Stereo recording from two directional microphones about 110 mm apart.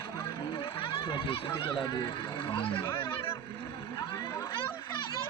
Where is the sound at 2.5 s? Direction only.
55° left (ahead or behind).